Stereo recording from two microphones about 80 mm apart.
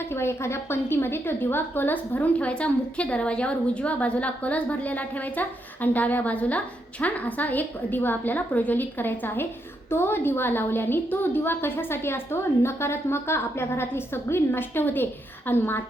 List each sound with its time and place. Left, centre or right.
0.1 s a woman's voice: left